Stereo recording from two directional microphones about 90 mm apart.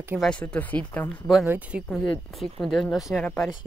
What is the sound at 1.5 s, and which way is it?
Speech, 15° right (ahead or behind).